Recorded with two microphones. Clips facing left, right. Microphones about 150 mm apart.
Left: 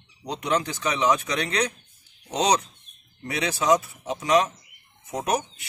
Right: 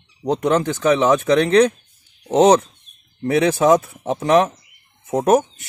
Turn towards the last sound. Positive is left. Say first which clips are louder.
# right 11 dB
turn(degrees=-50)  # may be behind; listen again after turning